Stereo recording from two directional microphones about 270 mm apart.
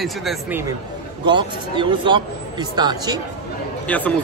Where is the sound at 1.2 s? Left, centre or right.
Centre.